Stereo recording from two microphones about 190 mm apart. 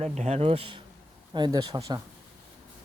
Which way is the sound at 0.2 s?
35° right (ahead or behind).